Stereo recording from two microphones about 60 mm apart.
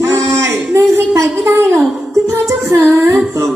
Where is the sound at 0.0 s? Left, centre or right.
Right.